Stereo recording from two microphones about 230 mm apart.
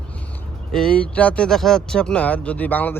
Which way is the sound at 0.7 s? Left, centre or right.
Centre.